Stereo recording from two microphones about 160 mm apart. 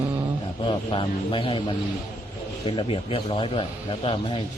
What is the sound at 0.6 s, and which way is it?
Speech, 30° left (ahead or behind).